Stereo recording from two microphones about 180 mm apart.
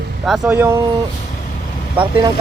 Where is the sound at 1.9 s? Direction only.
25° right (ahead or behind).